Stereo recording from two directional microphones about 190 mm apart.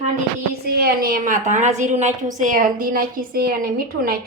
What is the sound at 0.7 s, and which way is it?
A woman's voice, 55° right (ahead or behind).